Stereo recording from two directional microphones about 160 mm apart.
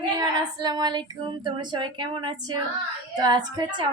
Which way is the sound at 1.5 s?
30° right (ahead or behind).